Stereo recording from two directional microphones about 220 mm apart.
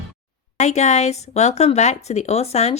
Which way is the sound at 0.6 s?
30° left (ahead or behind).